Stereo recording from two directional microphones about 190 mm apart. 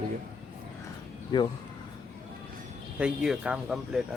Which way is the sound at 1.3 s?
20° left (ahead or behind).